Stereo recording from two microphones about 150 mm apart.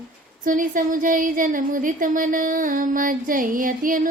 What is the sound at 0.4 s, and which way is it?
A woman's voice, 65° right (ahead or behind).